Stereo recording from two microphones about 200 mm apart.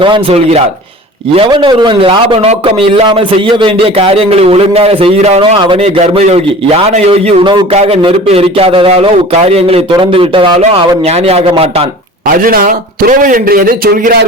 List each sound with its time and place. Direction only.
0.0 s a man's voice: 25° right (ahead or behind)
12.4 s a man's voice: 45° right (ahead or behind)